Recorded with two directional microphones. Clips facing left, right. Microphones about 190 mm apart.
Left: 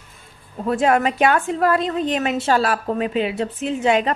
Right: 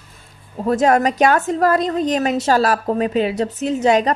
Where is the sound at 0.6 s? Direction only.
40° right (ahead or behind).